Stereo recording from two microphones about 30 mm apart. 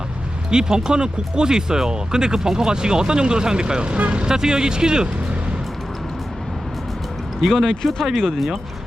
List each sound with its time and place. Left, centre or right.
0.5 s speech: right
3.8 s speech: right
4.3 s speech: right
7.7 s speech: centre